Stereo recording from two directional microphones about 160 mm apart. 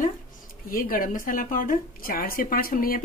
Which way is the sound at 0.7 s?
60° left (ahead or behind).